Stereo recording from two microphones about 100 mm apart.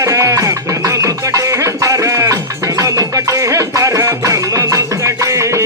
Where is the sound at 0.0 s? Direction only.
35° right (ahead or behind).